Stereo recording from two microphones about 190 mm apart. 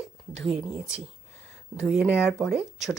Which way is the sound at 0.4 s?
5° right (ahead or behind).